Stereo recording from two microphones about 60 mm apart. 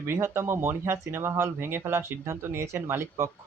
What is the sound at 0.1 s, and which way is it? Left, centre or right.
Speech, right.